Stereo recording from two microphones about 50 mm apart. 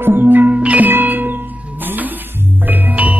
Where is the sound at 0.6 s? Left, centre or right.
Right.